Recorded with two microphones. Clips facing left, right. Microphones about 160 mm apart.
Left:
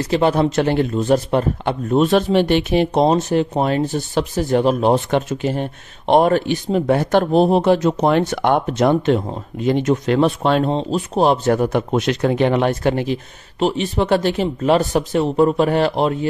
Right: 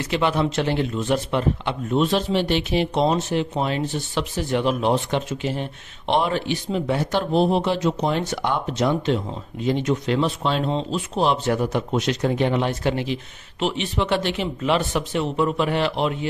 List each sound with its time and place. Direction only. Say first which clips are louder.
0.0 s a man's voice: left 5 dB; 40° left (ahead or behind); by 10.7 s 55° left (ahead or behind)
10.7 s a man's voice: left 5 dB; 40° left (ahead or behind)